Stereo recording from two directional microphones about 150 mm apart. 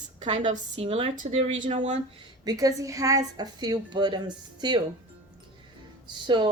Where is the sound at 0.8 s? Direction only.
40° right (ahead or behind).